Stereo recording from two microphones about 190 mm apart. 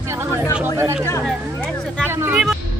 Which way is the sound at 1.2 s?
Centre (ahead or behind).